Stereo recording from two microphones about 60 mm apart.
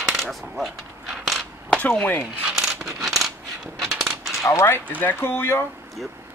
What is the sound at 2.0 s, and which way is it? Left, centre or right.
Speech, left.